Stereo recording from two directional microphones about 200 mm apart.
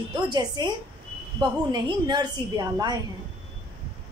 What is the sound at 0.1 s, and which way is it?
A woman's voice, 20° right (ahead or behind).